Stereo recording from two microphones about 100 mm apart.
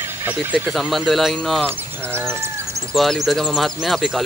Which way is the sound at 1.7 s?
20° right (ahead or behind).